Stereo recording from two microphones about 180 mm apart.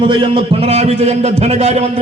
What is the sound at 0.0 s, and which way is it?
A man's voice, 30° right (ahead or behind).